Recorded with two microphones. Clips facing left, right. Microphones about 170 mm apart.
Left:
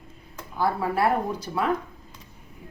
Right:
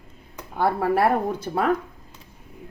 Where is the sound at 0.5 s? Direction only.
60° right (ahead or behind).